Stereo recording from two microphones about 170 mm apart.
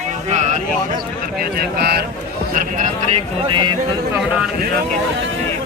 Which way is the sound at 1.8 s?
70° right (ahead or behind).